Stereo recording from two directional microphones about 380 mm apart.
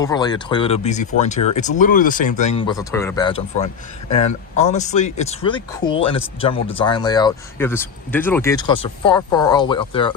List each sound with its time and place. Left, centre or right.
0.0 s speech: centre